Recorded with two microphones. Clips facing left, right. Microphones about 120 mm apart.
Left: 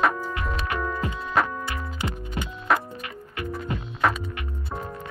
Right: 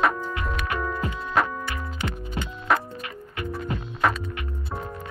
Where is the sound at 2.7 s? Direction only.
Centre (ahead or behind).